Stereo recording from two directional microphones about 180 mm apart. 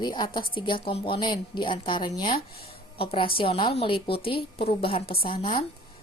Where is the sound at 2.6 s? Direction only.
30° left (ahead or behind).